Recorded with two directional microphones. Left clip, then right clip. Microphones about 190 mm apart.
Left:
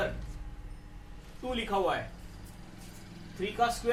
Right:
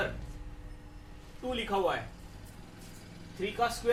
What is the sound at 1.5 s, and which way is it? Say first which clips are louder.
Speech: left 1 dB; 5° left (ahead or behind).